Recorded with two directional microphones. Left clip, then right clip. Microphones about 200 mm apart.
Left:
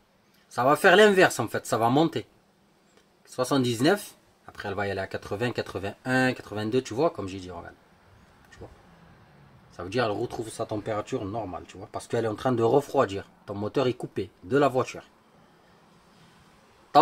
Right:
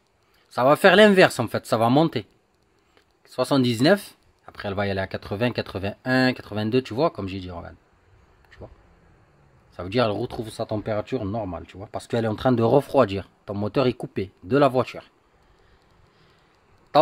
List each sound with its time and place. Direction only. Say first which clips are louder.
0.5 s speech: right 3 dB; 45° right (ahead or behind)
3.3 s speech: right 4 dB; 45° right (ahead or behind)
9.8 s speech: right 4 dB; 45° right (ahead or behind)